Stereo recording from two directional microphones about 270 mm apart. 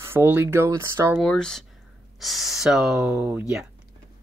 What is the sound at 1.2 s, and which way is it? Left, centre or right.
Speech, centre.